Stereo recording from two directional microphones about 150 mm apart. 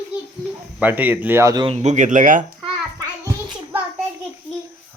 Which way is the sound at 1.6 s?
45° right (ahead or behind).